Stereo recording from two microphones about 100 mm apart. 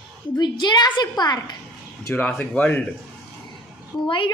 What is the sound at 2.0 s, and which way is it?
Speech, 20° left (ahead or behind).